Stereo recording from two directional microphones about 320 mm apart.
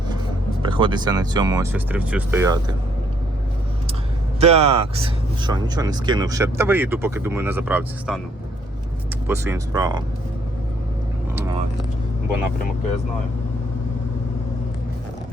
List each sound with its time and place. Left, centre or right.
0.6 s speech: centre
4.4 s speech: centre
9.2 s speech: centre